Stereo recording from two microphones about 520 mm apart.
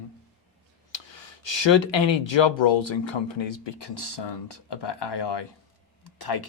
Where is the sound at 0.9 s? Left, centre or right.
Left.